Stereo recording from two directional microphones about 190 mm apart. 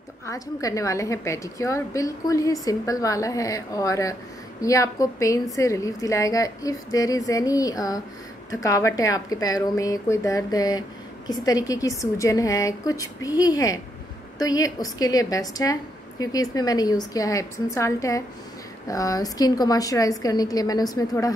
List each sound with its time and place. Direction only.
0.3 s a woman's voice: 15° left (ahead or behind)